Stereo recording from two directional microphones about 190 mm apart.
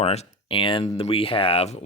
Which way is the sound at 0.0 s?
35° left (ahead or behind).